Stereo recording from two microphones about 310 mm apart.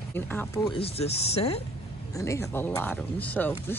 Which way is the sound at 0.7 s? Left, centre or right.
Centre.